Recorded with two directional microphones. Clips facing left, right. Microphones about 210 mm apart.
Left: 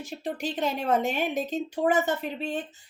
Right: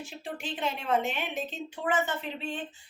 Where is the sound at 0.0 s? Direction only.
40° left (ahead or behind).